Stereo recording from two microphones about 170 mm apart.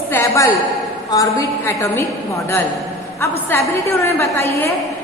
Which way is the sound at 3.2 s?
15° left (ahead or behind).